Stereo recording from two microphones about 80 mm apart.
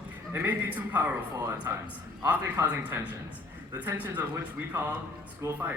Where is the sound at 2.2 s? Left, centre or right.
Right.